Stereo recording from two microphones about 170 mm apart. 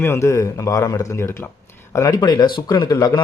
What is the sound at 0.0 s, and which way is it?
Speech, 15° left (ahead or behind).